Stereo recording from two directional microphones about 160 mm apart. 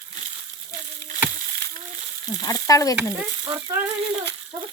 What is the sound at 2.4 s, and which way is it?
Frying, 20° left (ahead or behind).